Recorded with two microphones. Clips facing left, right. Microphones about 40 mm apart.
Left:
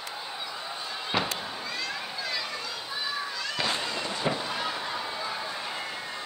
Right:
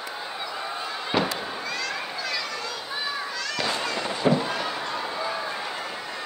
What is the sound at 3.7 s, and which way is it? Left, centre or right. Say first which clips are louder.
Fireworks: right 4 dB; right.